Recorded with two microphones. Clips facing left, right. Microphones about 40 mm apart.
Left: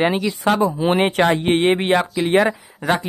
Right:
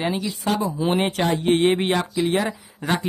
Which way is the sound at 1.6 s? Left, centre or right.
Centre.